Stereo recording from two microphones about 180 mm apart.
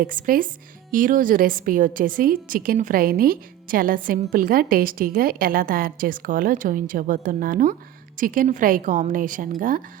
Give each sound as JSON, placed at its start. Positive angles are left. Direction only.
{"t": 0.0, "sound": "a woman's voice", "side_deg": -50}